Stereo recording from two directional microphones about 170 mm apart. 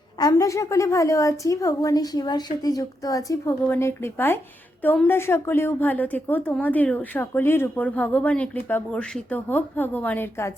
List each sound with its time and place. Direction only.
0.2 s a woman's voice: 20° left (ahead or behind)